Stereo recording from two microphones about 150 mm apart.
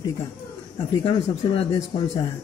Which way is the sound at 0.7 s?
30° left (ahead or behind).